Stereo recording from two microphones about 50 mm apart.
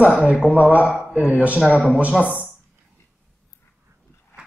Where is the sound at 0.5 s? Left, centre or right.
Right.